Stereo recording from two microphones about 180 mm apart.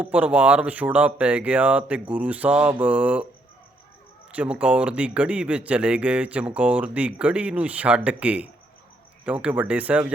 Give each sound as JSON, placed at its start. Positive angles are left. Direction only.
{"t": 0.0, "sound": "speech", "side_deg": -10}
{"t": 4.3, "sound": "speech", "side_deg": -5}